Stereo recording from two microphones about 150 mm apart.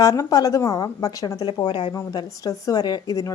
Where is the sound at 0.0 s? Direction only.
20° left (ahead or behind).